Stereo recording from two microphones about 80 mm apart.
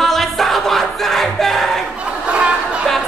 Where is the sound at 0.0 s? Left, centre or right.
Centre.